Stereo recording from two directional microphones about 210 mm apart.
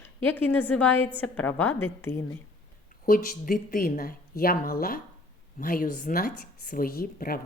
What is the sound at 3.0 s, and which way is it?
Speech, 40° left (ahead or behind).